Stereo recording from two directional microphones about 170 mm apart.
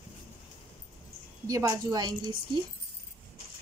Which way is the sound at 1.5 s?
20° right (ahead or behind).